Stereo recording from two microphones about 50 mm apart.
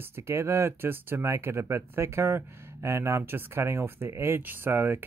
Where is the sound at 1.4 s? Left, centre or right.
Right.